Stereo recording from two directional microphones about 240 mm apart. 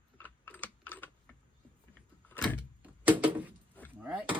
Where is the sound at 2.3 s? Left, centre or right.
Centre.